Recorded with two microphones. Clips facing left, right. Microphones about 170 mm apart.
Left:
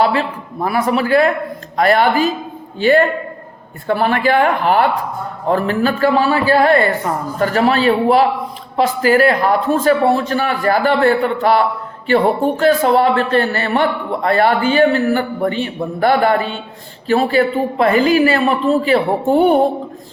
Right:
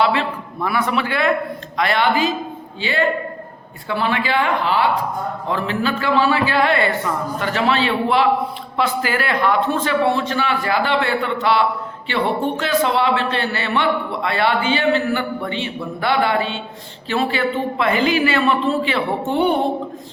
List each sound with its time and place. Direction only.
0.0 s a woman's voice: 40° left (ahead or behind)
3.8 s a woman's voice: 50° left (ahead or behind)